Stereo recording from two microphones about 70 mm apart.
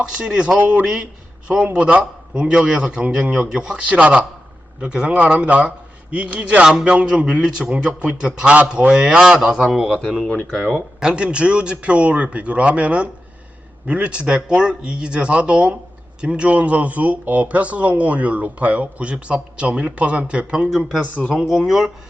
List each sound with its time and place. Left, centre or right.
0.0 s a man's voice: centre
6.7 s a man's voice: centre
10.2 s speech: left
10.6 s speech: centre
11.0 s a man's voice: centre
20.7 s speech: centre